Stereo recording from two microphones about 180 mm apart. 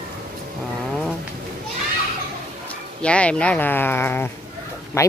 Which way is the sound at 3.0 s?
5° left (ahead or behind).